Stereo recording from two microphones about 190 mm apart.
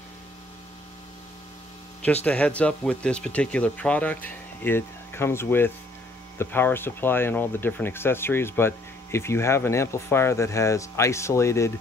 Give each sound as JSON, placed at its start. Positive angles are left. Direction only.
{"t": 2.2, "sound": "speech", "side_deg": 5}